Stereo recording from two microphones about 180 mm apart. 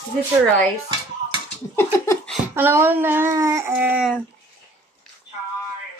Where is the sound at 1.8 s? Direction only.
10° left (ahead or behind).